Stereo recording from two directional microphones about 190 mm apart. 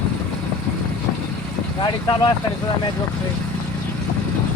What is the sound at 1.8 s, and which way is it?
Speech, 25° left (ahead or behind).